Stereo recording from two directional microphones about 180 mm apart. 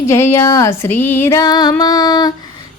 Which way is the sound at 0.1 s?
15° left (ahead or behind).